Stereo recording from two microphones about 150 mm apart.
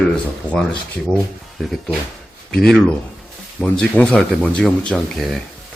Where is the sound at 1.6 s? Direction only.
Centre (ahead or behind).